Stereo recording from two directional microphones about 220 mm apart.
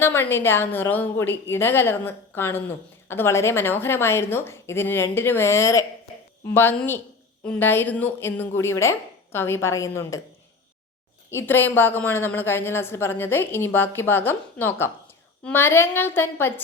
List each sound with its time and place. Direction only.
0.0 s a woman's voice: 10° left (ahead or behind)
11.3 s a woman's voice: 10° left (ahead or behind)